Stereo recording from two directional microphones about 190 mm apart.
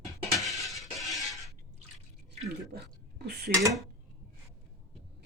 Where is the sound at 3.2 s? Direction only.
60° right (ahead or behind).